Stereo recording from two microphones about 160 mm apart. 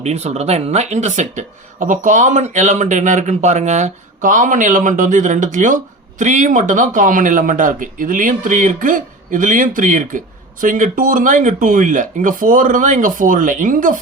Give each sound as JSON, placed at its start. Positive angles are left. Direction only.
{"t": 0.0, "sound": "speech", "side_deg": -45}